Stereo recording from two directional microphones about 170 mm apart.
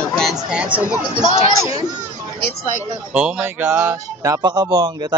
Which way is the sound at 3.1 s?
5° right (ahead or behind).